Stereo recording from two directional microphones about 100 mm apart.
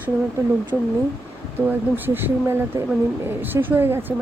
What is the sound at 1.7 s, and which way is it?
Speech, 20° right (ahead or behind).